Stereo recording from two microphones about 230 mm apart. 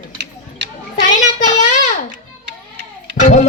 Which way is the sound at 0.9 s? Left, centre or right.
Left.